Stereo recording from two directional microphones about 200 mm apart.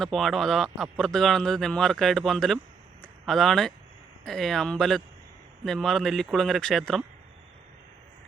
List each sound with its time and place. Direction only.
0.0 s speech: centre (ahead or behind)
3.0 s a sound: centre (ahead or behind)
4.3 s speech: centre (ahead or behind)